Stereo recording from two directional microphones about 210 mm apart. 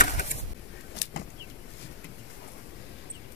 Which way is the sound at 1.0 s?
55° left (ahead or behind).